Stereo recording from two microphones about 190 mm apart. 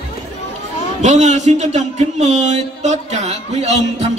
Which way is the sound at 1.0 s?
35° right (ahead or behind).